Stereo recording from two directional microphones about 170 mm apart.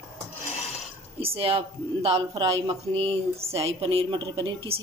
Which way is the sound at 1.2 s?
35° right (ahead or behind).